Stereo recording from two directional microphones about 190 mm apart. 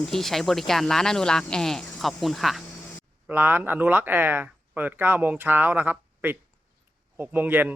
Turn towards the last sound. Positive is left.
turn(degrees=-10)  # may be behind; listen again after turning